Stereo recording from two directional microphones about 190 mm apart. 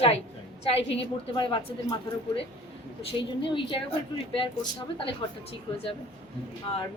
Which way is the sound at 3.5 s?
25° left (ahead or behind).